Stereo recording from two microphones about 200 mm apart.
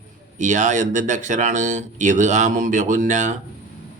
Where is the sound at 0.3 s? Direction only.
40° right (ahead or behind).